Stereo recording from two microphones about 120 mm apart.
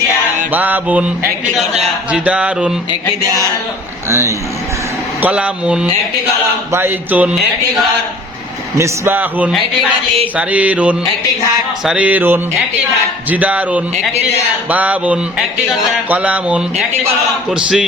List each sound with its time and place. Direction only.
0.5 s speech: 15° right (ahead or behind)
2.1 s speech: 10° right (ahead or behind)
4.1 s speech: 25° right (ahead or behind)
5.2 s speech: 10° right (ahead or behind)
8.8 s speech: 15° right (ahead or behind)